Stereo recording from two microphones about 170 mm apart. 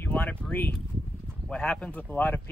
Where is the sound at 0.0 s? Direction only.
10° left (ahead or behind).